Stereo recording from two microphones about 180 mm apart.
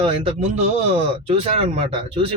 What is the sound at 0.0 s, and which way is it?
Speech, 30° right (ahead or behind).